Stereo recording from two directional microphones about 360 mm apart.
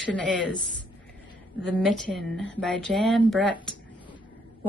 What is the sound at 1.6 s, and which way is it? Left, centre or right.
Speech, centre.